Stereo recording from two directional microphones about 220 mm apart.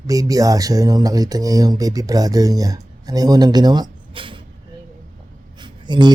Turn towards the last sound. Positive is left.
turn(degrees=-20)  # may be behind; listen again after turning